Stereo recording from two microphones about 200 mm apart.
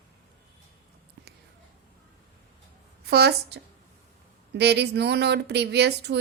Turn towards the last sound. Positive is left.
turn(degrees=-55)  # may be behind; listen again after turning